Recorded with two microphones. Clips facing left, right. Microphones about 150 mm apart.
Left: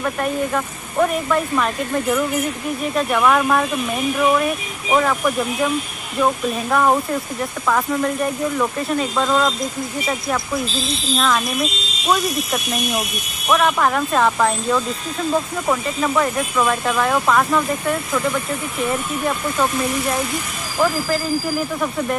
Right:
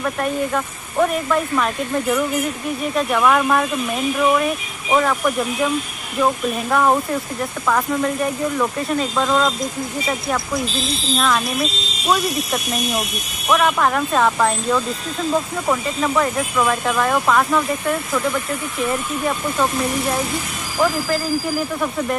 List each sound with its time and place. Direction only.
0.0 s speech: centre (ahead or behind)